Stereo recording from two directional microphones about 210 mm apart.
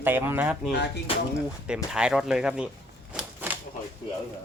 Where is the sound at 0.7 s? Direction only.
55° left (ahead or behind).